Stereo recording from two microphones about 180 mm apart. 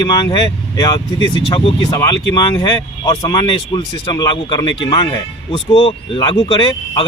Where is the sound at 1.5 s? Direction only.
25° left (ahead or behind).